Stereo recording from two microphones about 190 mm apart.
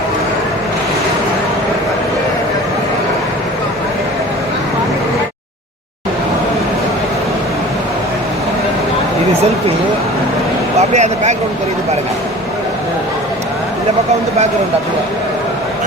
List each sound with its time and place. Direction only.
10.8 s speech: 35° right (ahead or behind)